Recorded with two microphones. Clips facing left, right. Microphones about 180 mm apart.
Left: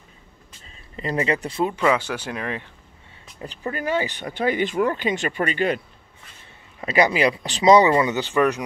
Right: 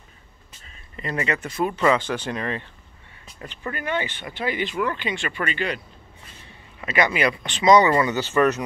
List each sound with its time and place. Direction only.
0.9 s speech: 30° left (ahead or behind)
1.8 s speech: 10° left (ahead or behind)
3.6 s speech: 35° left (ahead or behind)
6.8 s speech: 35° left (ahead or behind)
7.9 s speech: 20° left (ahead or behind)